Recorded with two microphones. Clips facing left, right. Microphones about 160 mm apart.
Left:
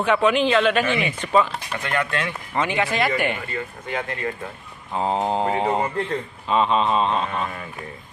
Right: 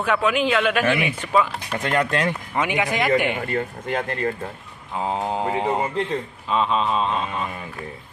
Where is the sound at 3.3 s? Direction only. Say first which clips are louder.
Right 5 dB; 50° right (ahead or behind).